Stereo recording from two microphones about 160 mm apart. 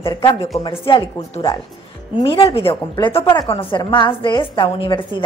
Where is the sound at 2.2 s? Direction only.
35° left (ahead or behind).